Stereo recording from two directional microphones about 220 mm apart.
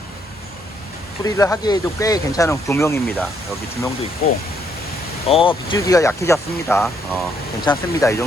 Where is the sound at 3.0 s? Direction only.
Centre (ahead or behind).